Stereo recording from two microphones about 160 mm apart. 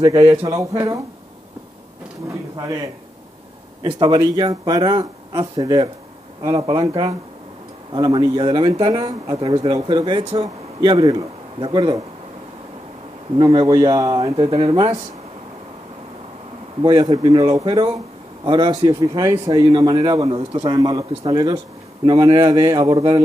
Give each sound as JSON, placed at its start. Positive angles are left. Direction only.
{"t": 0.0, "sound": "speech", "side_deg": -20}
{"t": 2.2, "sound": "a man's voice", "side_deg": -20}
{"t": 13.4, "sound": "speech", "side_deg": -25}
{"t": 14.3, "sound": "speech", "side_deg": -35}
{"t": 14.6, "sound": "speech", "side_deg": -25}
{"t": 16.8, "sound": "speech", "side_deg": -25}
{"t": 18.9, "sound": "speech", "side_deg": -20}